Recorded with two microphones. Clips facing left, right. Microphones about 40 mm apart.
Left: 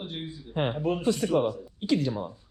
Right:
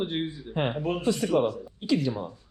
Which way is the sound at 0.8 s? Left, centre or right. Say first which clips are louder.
Left 1 dB; right.